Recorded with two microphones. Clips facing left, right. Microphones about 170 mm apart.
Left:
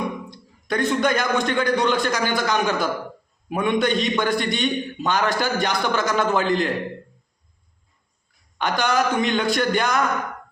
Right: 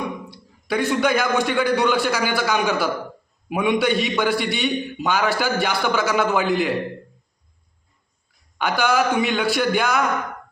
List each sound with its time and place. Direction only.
0.3 s a man's voice: 10° right (ahead or behind)
8.5 s a man's voice: 5° right (ahead or behind)